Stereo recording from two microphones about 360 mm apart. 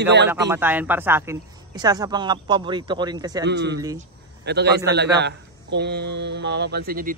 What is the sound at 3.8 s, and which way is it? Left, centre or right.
Speech, centre.